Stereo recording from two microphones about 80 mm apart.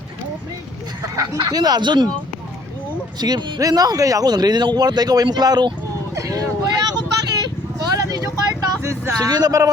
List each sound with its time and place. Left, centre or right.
1.0 s speech: right
3.2 s speech: right
6.1 s vehicle: right
8.8 s vehicle: right
9.3 s speech: right